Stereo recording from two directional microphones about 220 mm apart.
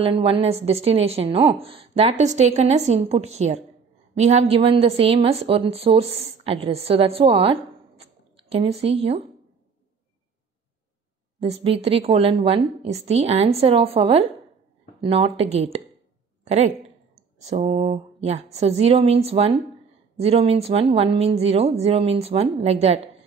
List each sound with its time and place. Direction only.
0.0 s a woman's voice: 25° right (ahead or behind)
11.3 s a woman's voice: 25° right (ahead or behind)